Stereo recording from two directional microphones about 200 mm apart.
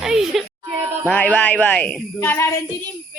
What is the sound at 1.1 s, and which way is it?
Speech, 5° left (ahead or behind).